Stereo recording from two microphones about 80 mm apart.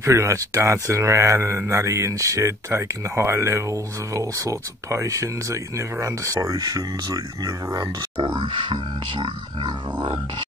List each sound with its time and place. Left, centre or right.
0.0 s speech: right
9.7 s grunt: right